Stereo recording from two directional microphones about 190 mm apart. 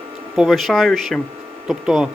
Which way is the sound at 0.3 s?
Centre (ahead or behind).